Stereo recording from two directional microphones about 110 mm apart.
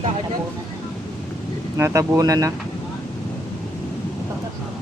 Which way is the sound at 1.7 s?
25° right (ahead or behind).